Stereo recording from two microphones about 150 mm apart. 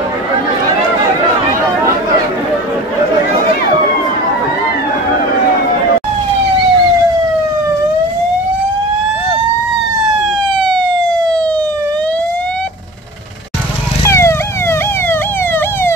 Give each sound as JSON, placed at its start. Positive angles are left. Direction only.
{"t": 10.6, "sound": "emergency vehicle", "side_deg": 5}
{"t": 14.0, "sound": "police car", "side_deg": 15}